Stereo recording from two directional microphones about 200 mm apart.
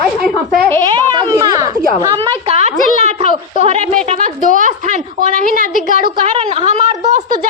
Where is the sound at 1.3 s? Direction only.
15° right (ahead or behind).